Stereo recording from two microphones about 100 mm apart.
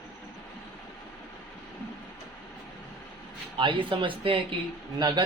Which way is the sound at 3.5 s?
60° right (ahead or behind).